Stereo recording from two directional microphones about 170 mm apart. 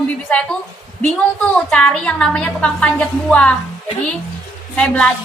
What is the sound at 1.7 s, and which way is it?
A woman's voice, 5° left (ahead or behind).